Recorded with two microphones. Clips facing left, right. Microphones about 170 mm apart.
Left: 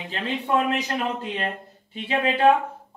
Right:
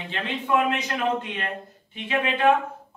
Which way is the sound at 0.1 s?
35° left (ahead or behind).